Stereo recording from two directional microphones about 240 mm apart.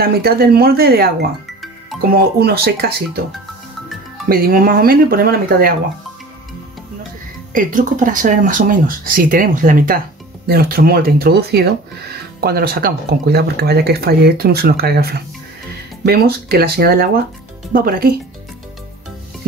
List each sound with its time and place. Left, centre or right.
0.0 s speech: right
4.3 s speech: right
7.5 s speech: right